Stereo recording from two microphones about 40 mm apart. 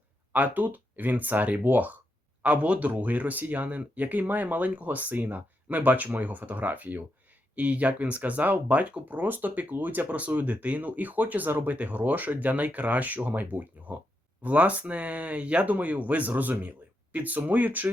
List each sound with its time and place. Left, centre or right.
0.3 s speech: right
2.4 s speech: right
11.8 s speech: right